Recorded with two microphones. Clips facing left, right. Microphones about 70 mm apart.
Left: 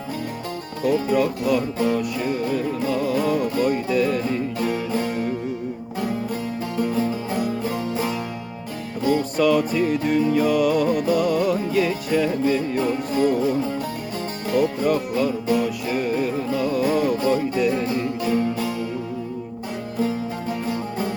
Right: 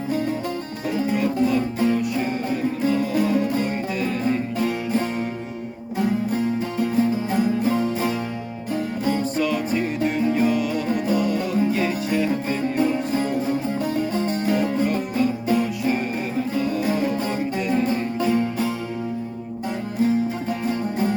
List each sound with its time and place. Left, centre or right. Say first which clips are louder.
0.9 s music: left 3 dB; right
6.3 s music: right 3 dB; right
10.6 s music: left 6 dB; left
10.8 s music: left 2 dB; right